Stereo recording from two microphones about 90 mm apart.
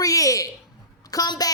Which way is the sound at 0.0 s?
40° left (ahead or behind).